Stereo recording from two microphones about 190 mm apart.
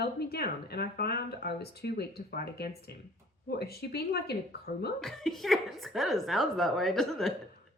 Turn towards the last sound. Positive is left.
turn(degrees=0)  # may be behind; listen again after turning